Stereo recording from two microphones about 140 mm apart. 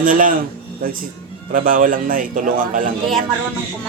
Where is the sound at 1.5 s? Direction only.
80° right.